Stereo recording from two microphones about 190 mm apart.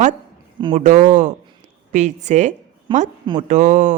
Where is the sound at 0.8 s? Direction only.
40° right (ahead or behind).